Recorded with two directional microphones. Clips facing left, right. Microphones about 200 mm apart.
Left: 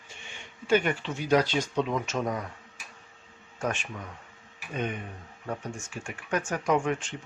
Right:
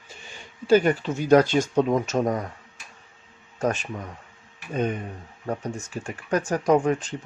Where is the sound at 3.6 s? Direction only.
40° right (ahead or behind).